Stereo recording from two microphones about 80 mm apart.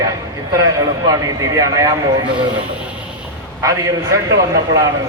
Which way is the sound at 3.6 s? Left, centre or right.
Right.